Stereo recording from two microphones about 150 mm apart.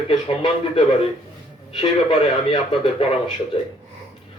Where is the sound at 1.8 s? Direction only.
35° left (ahead or behind).